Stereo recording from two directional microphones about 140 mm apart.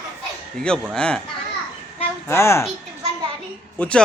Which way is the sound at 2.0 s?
20° left (ahead or behind).